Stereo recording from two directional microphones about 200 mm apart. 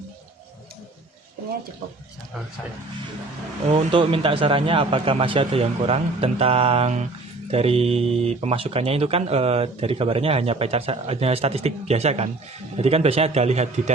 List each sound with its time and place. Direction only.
3.7 s a man's voice: 25° right (ahead or behind)